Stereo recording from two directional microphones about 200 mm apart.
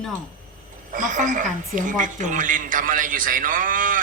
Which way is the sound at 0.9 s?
40° right (ahead or behind).